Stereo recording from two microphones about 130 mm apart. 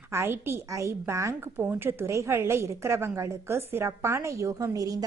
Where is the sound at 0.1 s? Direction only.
20° right (ahead or behind).